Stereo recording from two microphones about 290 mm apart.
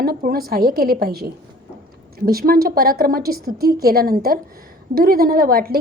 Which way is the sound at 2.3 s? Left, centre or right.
Right.